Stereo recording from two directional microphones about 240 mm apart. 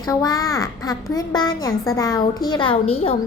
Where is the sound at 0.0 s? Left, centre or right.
Centre.